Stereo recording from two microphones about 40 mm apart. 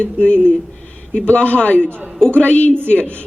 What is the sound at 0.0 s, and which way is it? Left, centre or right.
Speech, left.